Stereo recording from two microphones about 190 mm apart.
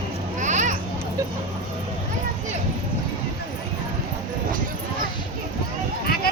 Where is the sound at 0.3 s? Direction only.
40° right (ahead or behind).